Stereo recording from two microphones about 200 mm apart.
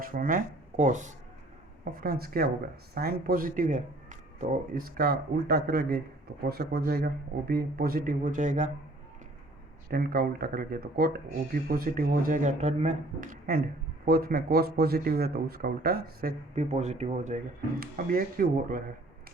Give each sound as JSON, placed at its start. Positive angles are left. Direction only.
{"t": 0.0, "sound": "speech", "side_deg": -45}
{"t": 9.9, "sound": "speech", "side_deg": -50}
{"t": 16.6, "sound": "speech", "side_deg": -35}